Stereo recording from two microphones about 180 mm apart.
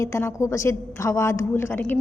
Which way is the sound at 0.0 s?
15° left (ahead or behind).